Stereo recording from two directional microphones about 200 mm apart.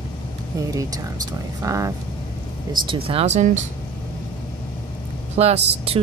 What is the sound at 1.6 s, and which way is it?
Speech, 15° right (ahead or behind).